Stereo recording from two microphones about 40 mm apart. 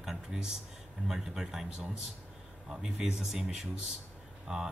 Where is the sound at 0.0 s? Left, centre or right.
Centre.